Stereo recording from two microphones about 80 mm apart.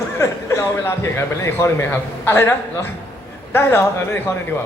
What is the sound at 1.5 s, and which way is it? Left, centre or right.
A man's voice, left.